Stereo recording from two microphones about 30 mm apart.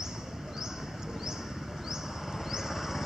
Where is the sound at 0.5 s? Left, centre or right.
Centre.